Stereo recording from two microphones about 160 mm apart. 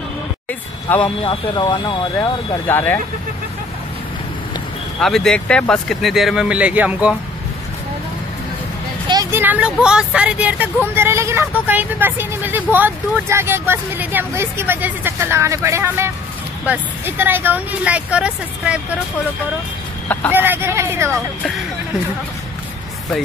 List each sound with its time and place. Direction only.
0.5 s vehicle: 10° left (ahead or behind)
1.0 s speech: 30° left (ahead or behind)
5.0 s speech: 5° left (ahead or behind)
9.1 s speech: 20° right (ahead or behind)
20.1 s speech: 10° left (ahead or behind)
20.3 s speech: 15° right (ahead or behind)